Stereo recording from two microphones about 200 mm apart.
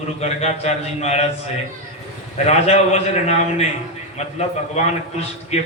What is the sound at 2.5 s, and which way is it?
Speech, 30° left (ahead or behind).